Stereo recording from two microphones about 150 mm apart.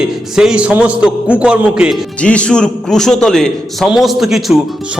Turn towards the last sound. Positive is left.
turn(degrees=0)  # may be behind; listen again after turning